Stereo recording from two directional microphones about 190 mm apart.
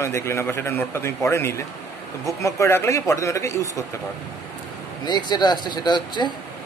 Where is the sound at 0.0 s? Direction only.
15° left (ahead or behind).